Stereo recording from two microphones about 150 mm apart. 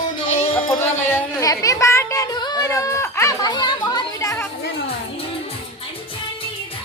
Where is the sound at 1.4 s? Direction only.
20° left (ahead or behind).